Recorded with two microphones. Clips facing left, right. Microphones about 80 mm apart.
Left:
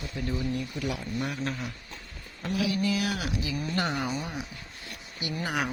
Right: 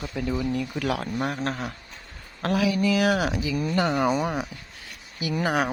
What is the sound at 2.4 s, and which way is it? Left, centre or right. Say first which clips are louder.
Speech: right 5 dB; right.